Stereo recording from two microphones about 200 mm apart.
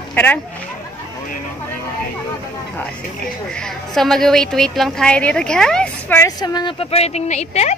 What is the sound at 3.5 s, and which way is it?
A woman's voice, centre (ahead or behind).